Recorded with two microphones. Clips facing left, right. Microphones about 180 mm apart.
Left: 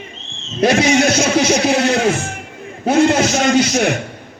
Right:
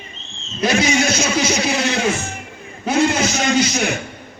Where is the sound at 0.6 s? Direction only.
60° left (ahead or behind).